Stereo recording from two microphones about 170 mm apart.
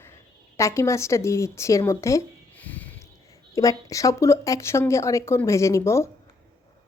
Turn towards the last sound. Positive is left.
turn(degrees=15)  # may be behind; listen again after turning